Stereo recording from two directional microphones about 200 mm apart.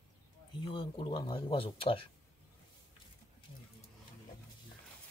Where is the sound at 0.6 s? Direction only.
25° left (ahead or behind).